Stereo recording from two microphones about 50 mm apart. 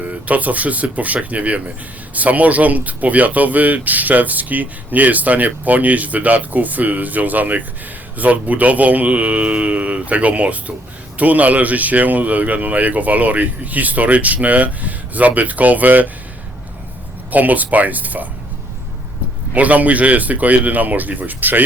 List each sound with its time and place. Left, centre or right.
0.0 s speech: right
17.3 s speech: right
19.5 s speech: right